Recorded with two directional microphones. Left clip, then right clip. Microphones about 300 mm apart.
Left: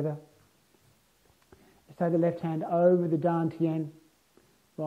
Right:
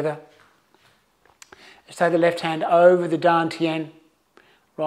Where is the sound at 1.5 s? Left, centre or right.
Centre.